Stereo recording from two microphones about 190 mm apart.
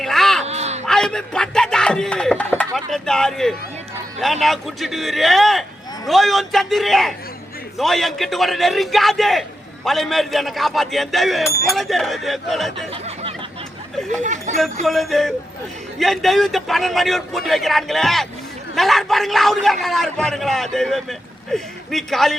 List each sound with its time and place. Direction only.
0.0 s a sound: centre (ahead or behind)
0.4 s a sound: 35° right (ahead or behind)
0.9 s a man's voice: 5° left (ahead or behind)
12.9 s snicker: 30° right (ahead or behind)
14.2 s speech: 40° right (ahead or behind)
14.8 s a man's voice: centre (ahead or behind)